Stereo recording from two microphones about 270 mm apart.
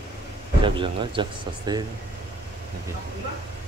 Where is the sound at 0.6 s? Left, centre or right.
Centre.